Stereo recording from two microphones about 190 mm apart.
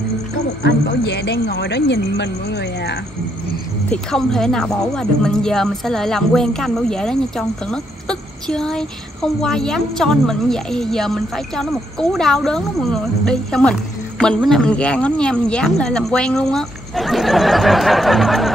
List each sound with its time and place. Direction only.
0.7 s speech: 65° left (ahead or behind)
3.9 s speech: centre (ahead or behind)